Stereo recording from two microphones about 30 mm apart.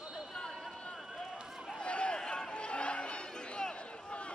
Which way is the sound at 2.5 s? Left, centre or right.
Left.